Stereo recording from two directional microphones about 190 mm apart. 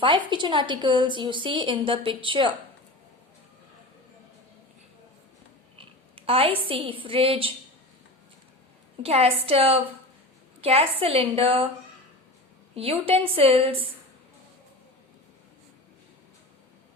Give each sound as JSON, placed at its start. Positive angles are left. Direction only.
{"t": 0.0, "sound": "a woman's voice", "side_deg": -25}
{"t": 5.7, "sound": "a woman's voice", "side_deg": -30}
{"t": 9.0, "sound": "a woman's voice", "side_deg": -30}
{"t": 12.7, "sound": "a woman's voice", "side_deg": -30}